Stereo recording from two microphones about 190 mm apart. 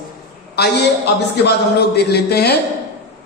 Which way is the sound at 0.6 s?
55° left (ahead or behind).